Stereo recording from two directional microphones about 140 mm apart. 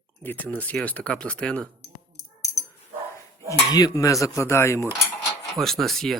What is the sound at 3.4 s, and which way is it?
Speech, 25° left (ahead or behind).